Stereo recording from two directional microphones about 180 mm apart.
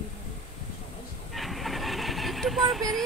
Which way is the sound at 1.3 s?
Centre (ahead or behind).